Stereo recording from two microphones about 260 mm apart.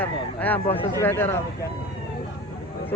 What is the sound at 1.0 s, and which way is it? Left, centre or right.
Speech, centre.